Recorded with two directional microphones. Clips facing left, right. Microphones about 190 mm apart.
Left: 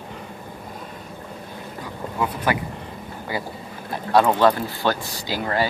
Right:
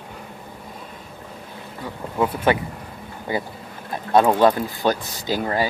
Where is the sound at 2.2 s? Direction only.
25° right (ahead or behind).